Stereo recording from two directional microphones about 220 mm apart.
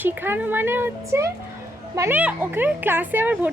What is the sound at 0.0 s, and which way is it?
Speech, 10° right (ahead or behind).